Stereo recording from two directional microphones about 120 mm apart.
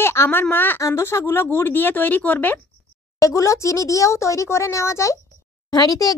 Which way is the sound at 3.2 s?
25° left (ahead or behind).